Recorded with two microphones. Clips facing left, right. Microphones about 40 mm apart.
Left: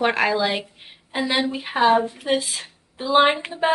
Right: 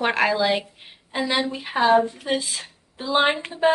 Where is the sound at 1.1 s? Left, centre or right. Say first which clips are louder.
Left 1 dB; centre.